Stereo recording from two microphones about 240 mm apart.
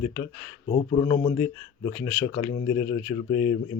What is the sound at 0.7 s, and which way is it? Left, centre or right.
Speech, centre.